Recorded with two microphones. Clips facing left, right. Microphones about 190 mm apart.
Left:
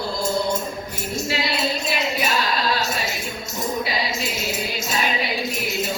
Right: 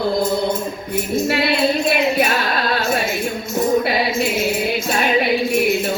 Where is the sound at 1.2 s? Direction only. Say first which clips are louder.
Right 6 dB; 60° right (ahead or behind).